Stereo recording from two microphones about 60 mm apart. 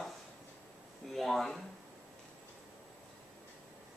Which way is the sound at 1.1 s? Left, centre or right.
Centre.